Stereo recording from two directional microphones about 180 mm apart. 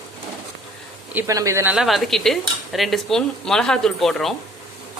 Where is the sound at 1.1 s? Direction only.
20° right (ahead or behind).